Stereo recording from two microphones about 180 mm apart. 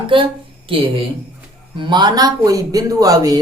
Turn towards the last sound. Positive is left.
turn(degrees=-20)  # may be behind; listen again after turning